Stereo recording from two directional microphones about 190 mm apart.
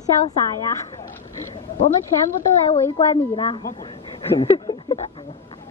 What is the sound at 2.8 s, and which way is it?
A woman's voice, 25° left (ahead or behind).